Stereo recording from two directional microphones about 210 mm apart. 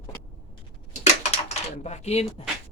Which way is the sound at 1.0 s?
30° left (ahead or behind).